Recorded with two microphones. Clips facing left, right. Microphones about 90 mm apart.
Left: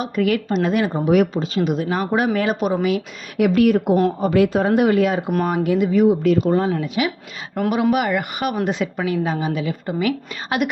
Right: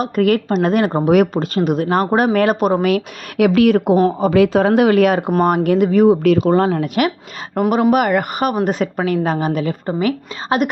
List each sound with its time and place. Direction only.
0.0 s a woman's voice: 50° right (ahead or behind)
2.8 s speech: 75° right (ahead or behind)
5.6 s speech: 55° right (ahead or behind)
6.3 s speech: 75° right (ahead or behind); by 7.1 s 55° right (ahead or behind)
7.7 s a woman's voice: 40° right (ahead or behind)